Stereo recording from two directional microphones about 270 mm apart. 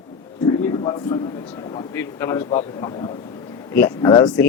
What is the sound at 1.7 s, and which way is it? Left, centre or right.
Speech, centre.